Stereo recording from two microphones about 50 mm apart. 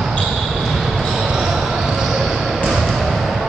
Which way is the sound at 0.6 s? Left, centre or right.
Centre.